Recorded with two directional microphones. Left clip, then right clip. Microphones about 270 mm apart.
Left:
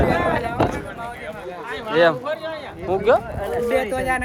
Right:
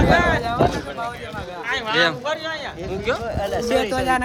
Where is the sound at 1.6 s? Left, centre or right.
Centre.